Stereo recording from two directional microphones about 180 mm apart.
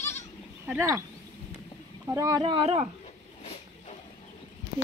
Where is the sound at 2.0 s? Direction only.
20° right (ahead or behind); by 2.9 s 35° right (ahead or behind).